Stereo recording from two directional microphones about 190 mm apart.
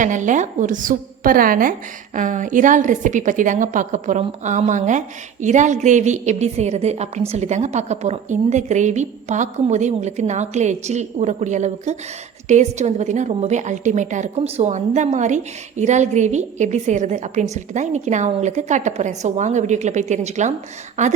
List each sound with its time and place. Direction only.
0.0 s a woman's voice: 40° right (ahead or behind)